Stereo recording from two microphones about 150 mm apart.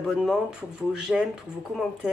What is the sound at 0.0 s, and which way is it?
Speech, centre (ahead or behind).